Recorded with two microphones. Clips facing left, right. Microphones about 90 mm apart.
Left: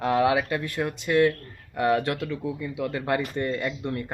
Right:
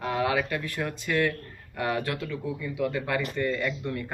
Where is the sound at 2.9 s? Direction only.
35° left (ahead or behind).